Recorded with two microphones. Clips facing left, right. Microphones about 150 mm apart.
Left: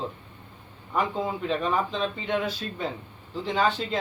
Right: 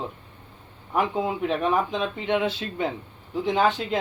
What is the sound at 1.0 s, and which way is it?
Speech, 10° right (ahead or behind).